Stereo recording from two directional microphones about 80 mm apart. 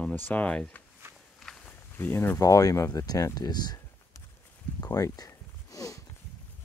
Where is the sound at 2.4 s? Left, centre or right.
Left.